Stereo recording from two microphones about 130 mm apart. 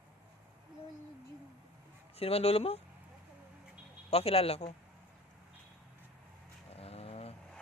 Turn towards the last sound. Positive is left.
turn(degrees=50)  # may be behind; listen again after turning